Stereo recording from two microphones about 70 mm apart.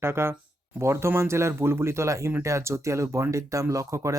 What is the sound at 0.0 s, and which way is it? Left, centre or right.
Speech, right.